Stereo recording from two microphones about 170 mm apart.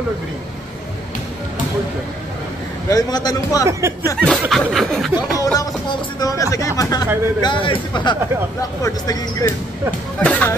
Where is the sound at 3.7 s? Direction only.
15° right (ahead or behind).